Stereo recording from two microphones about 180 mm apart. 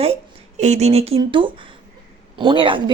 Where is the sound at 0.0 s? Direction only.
35° right (ahead or behind).